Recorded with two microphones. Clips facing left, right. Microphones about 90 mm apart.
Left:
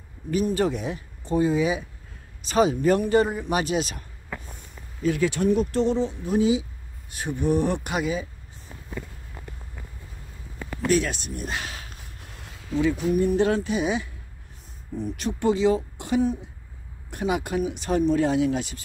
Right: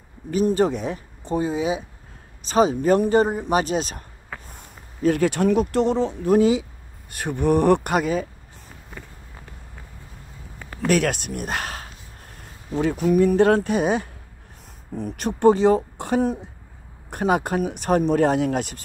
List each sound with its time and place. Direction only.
0.3 s speech: 35° right (ahead or behind)
5.0 s speech: 55° right (ahead or behind)
10.9 s speech: 60° right (ahead or behind); by 13.0 s 45° right (ahead or behind)
13.1 s speech: 70° right (ahead or behind)